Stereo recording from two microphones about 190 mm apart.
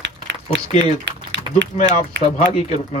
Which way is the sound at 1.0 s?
75° right (ahead or behind).